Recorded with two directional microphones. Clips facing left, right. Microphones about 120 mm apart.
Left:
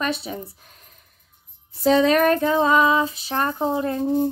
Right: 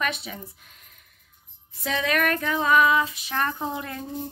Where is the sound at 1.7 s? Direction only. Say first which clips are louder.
Left 10 dB; 30° left (ahead or behind).